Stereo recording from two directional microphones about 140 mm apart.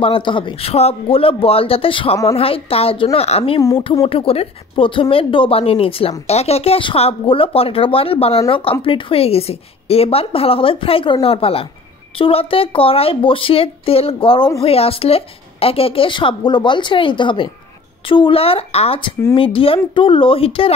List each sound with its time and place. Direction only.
0.0 s a woman's voice: 40° left (ahead or behind)